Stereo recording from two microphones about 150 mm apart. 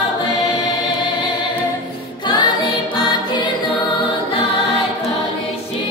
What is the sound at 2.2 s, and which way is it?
Music, 30° left (ahead or behind).